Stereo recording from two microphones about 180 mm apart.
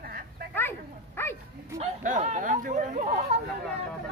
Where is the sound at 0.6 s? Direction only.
10° left (ahead or behind).